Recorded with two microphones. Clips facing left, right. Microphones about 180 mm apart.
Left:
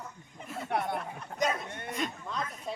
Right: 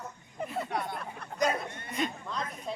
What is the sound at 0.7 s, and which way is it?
Speech, 60° left (ahead or behind).